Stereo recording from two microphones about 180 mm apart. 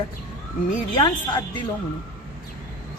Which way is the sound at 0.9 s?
25° left (ahead or behind).